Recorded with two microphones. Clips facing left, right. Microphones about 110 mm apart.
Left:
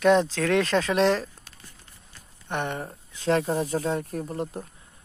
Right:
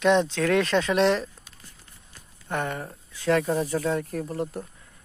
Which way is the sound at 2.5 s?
25° left (ahead or behind).